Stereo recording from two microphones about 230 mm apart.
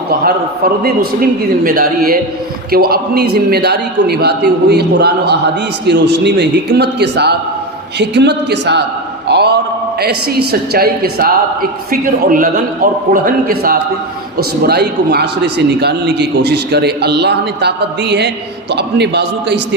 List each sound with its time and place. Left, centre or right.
0.1 s a woman's voice: right
9.2 s a sound: right
10.5 s a woman's voice: right